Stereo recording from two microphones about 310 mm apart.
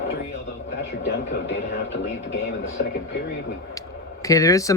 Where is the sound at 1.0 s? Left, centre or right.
Left.